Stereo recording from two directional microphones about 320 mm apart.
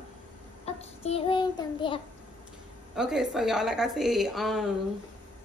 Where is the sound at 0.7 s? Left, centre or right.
Centre.